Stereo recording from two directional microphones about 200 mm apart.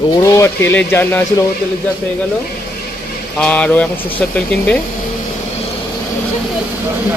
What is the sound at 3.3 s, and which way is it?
Speech, 5° left (ahead or behind).